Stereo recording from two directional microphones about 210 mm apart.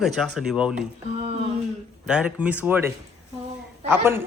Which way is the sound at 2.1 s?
5° right (ahead or behind).